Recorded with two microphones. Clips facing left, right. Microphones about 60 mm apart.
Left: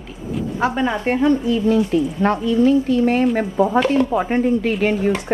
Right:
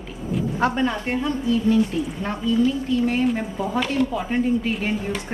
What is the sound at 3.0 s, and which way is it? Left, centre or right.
Speech, left.